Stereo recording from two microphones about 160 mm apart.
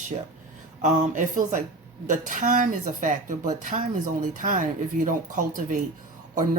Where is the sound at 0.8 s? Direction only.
50° right (ahead or behind).